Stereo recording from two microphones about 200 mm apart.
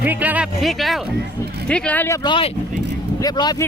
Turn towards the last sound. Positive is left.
turn(degrees=20)  # may be behind; listen again after turning